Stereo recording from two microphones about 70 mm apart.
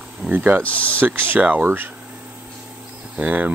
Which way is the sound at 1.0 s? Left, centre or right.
Right.